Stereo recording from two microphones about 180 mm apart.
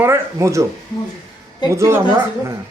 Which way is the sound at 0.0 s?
15° right (ahead or behind).